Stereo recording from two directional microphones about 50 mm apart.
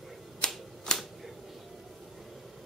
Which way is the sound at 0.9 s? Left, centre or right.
Centre.